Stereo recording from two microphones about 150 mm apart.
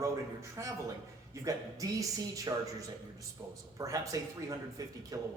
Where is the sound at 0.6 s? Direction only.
20° right (ahead or behind).